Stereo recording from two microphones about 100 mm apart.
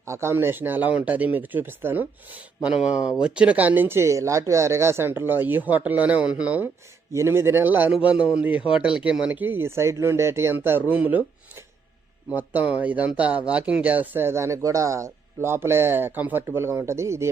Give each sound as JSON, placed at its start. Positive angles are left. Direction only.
{"t": 0.0, "sound": "speech", "side_deg": -25}
{"t": 7.1, "sound": "speech", "side_deg": -25}
{"t": 12.3, "sound": "speech", "side_deg": -15}